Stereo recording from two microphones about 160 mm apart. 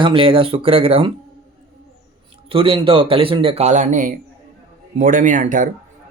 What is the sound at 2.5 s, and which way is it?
Speech, 35° right (ahead or behind).